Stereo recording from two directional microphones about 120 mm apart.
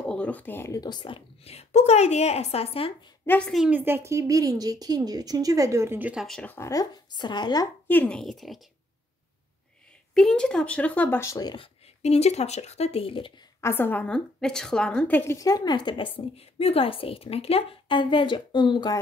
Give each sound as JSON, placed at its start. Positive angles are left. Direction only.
{"t": 0.0, "sound": "speech", "side_deg": 10}
{"t": 0.7, "sound": "a woman's voice", "side_deg": 40}
{"t": 3.3, "sound": "a woman's voice", "side_deg": 10}
{"t": 3.7, "sound": "a woman's voice", "side_deg": -20}
{"t": 6.1, "sound": "a woman's voice", "side_deg": 5}
{"t": 6.4, "sound": "a woman's voice", "side_deg": 15}
{"t": 6.7, "sound": "speech", "side_deg": 35}
{"t": 7.9, "sound": "a woman's voice", "side_deg": 10}
{"t": 10.1, "sound": "a woman's voice", "side_deg": 5}
{"t": 11.5, "sound": "a woman's voice", "side_deg": 55}
{"t": 13.6, "sound": "a woman's voice", "side_deg": 20}
{"t": 15.3, "sound": "speech", "side_deg": 30}
{"t": 16.3, "sound": "a woman's voice", "side_deg": 55}